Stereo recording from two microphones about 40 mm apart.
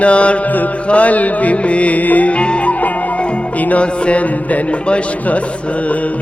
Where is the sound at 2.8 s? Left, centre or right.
Left.